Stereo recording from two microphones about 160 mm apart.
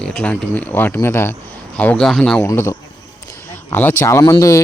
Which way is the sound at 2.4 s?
15° left (ahead or behind).